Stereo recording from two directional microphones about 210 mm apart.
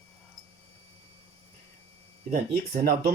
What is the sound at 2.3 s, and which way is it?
Speech, 40° right (ahead or behind).